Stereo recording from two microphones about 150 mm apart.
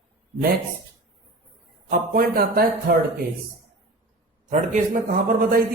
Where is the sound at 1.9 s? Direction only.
70° right (ahead or behind).